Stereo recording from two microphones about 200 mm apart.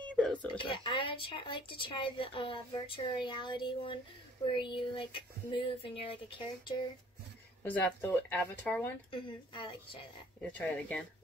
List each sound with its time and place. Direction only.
0.1 s a sound: 5° left (ahead or behind)
0.5 s speech: 25° left (ahead or behind)
7.6 s speech: 10° left (ahead or behind)
9.1 s speech: 25° left (ahead or behind)
10.4 s speech: 5° left (ahead or behind)